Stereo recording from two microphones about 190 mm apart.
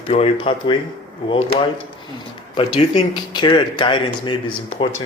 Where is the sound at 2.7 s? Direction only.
25° left (ahead or behind).